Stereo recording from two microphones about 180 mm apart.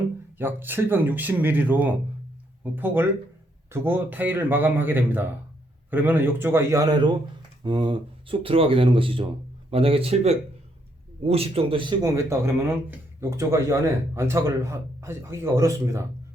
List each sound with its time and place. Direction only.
0.3 s speech: 10° right (ahead or behind)